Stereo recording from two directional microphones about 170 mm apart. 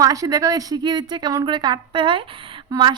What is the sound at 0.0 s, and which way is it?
A woman's voice, 20° right (ahead or behind).